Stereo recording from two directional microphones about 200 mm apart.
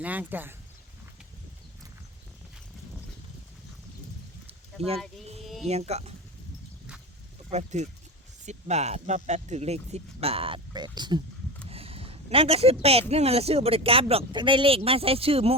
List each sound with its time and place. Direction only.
0.0 s speech: 10° right (ahead or behind)
5.4 s a sound: centre (ahead or behind)
5.6 s speech: 30° right (ahead or behind)
7.5 s speech: 35° right (ahead or behind)